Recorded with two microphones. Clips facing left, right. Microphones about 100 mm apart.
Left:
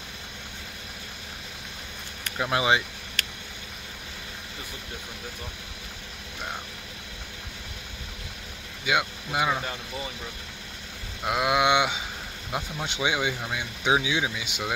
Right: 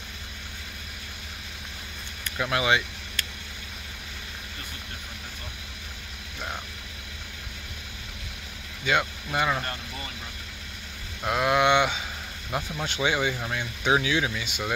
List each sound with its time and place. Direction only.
2.3 s speech: 20° left (ahead or behind)
8.8 s speech: 10° left (ahead or behind)
11.2 s speech: 10° left (ahead or behind)